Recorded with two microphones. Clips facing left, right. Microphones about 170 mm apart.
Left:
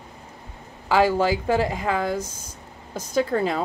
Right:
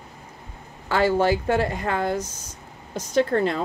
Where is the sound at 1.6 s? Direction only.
90° left.